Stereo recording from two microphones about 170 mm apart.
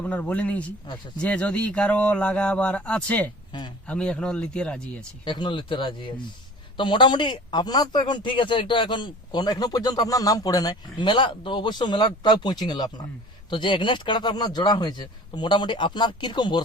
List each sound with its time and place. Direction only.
0.0 s a man's voice: 10° left (ahead or behind)
5.2 s speech: 25° left (ahead or behind)